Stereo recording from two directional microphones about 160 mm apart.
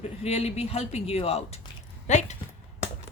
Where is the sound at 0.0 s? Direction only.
40° left (ahead or behind).